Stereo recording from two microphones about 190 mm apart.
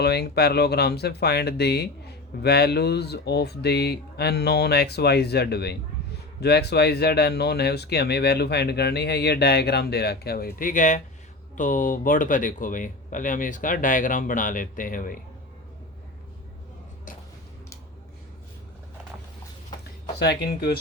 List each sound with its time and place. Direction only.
0.0 s speech: 60° left (ahead or behind)
20.1 s speech: 60° left (ahead or behind)